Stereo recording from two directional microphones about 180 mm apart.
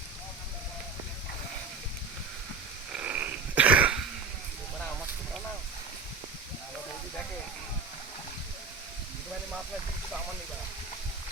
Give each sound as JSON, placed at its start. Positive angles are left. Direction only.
{"t": 2.9, "sound": "frog", "side_deg": -10}